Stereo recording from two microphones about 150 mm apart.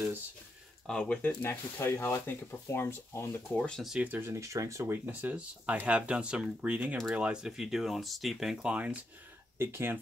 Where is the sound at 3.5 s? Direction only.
5° left (ahead or behind).